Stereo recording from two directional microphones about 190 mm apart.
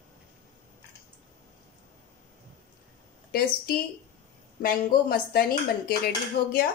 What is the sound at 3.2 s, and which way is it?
A woman's voice, 50° left (ahead or behind).